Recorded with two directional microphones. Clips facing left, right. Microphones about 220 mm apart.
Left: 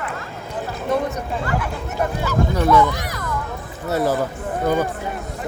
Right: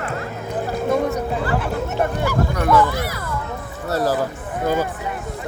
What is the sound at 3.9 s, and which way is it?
Speech, 20° left (ahead or behind).